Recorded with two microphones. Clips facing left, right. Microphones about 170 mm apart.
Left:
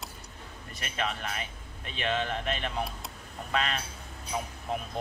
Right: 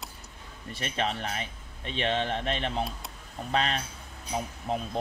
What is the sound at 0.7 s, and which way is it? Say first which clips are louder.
A man's voice: right 3 dB; 30° right (ahead or behind).